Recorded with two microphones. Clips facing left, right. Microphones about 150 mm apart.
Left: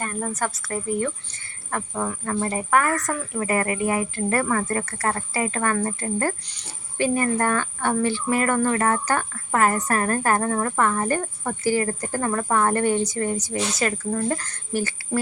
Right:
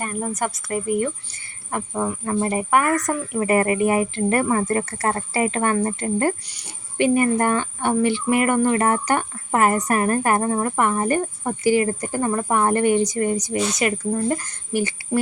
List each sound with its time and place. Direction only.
0.0 s speech: 15° right (ahead or behind)